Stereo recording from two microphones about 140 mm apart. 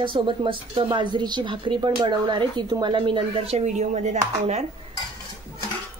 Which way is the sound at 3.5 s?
55° right (ahead or behind).